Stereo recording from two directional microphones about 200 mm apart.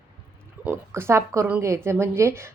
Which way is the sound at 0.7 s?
15° right (ahead or behind).